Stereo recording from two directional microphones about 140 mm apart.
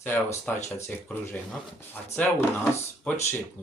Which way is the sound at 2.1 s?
10° left (ahead or behind).